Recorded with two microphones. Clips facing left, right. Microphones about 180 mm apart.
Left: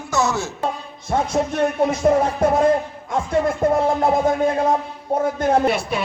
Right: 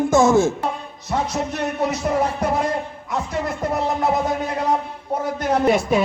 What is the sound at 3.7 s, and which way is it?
Music, 50° left (ahead or behind).